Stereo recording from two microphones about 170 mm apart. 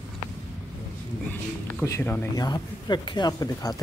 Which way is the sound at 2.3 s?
25° left (ahead or behind).